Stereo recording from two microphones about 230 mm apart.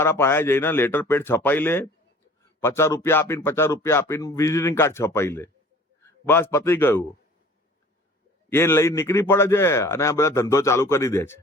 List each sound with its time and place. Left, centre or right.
0.0 s speech: centre
8.4 s speech: centre